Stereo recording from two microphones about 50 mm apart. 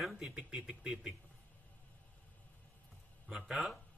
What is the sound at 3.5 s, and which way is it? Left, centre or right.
Speech, centre.